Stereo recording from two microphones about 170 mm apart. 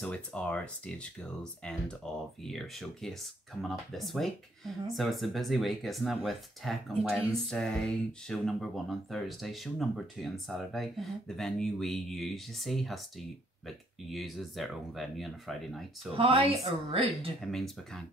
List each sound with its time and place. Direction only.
0.0 s speech: 5° left (ahead or behind)
16.2 s a woman's voice: 35° right (ahead or behind)
17.4 s speech: centre (ahead or behind)